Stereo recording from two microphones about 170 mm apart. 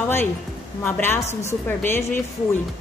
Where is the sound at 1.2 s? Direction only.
40° left (ahead or behind).